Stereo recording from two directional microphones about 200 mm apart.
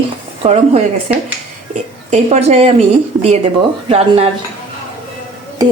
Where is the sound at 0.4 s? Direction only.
30° right (ahead or behind).